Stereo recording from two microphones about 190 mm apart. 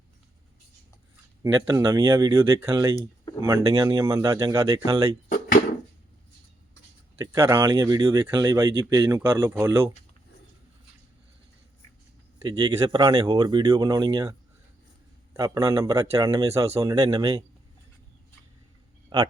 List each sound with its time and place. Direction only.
1.4 s speech: 20° right (ahead or behind)
5.3 s drawer open or close: 45° left (ahead or behind)
7.2 s speech: 15° right (ahead or behind)
12.5 s speech: 25° right (ahead or behind)